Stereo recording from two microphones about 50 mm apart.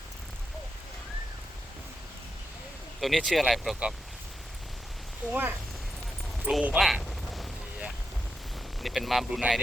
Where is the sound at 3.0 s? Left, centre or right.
Centre.